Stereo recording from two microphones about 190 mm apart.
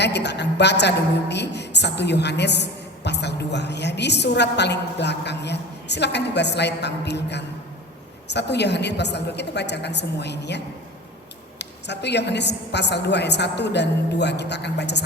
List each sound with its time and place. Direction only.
0.0 s a woman's voice: 65° left (ahead or behind)
11.6 s a woman's voice: 65° left (ahead or behind)